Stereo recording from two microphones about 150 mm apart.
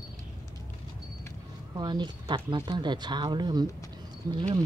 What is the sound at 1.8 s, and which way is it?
Speech, 30° right (ahead or behind).